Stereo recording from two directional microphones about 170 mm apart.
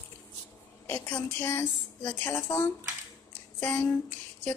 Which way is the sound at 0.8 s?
10° left (ahead or behind).